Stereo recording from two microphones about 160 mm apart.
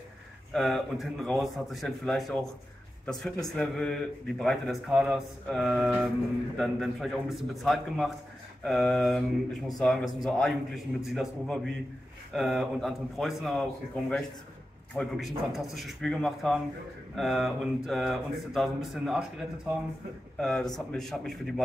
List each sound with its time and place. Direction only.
0.5 s a man's voice: centre (ahead or behind)
15.0 s a man's voice: centre (ahead or behind)
20.3 s a man's voice: 5° left (ahead or behind)